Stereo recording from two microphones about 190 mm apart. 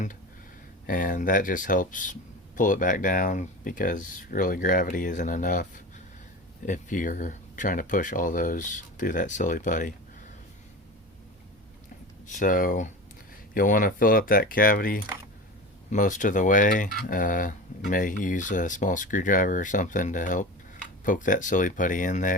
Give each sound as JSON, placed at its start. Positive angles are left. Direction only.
{"t": 0.9, "sound": "speech", "side_deg": 45}
{"t": 12.3, "sound": "speech", "side_deg": 45}